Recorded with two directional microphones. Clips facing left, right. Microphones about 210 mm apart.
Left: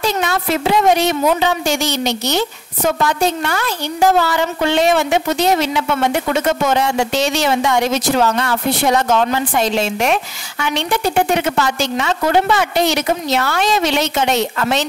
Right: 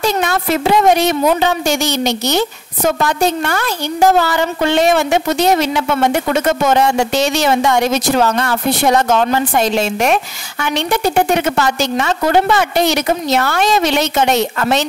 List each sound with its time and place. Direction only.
0.0 s a woman's voice: 50° right (ahead or behind)